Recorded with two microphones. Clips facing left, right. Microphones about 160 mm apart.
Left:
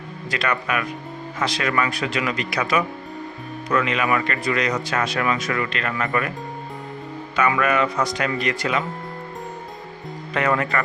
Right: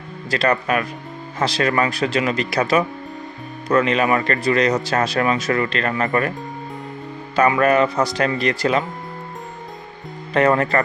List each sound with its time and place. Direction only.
0.3 s speech: 35° right (ahead or behind)
7.3 s speech: 35° right (ahead or behind)
10.3 s speech: 35° right (ahead or behind)